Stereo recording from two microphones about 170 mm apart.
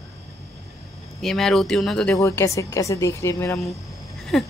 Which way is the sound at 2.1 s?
15° left (ahead or behind).